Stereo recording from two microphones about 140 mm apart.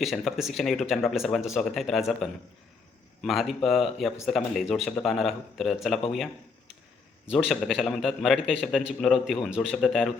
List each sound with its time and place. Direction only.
0.0 s a man's voice: centre (ahead or behind)
7.3 s a man's voice: centre (ahead or behind)